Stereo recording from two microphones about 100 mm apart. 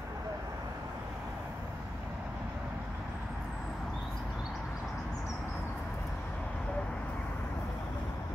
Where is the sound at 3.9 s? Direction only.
5° left (ahead or behind).